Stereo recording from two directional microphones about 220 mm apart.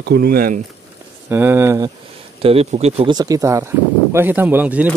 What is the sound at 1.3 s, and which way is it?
Speech, 10° right (ahead or behind).